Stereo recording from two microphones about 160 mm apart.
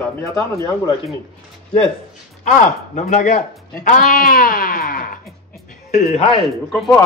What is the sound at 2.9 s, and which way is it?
Speech, 50° left (ahead or behind).